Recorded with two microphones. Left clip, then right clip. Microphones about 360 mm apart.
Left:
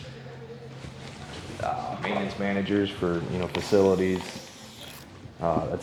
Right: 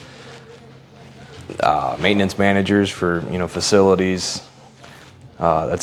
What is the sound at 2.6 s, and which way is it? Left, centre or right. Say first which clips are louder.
Speech: right 8 dB; right.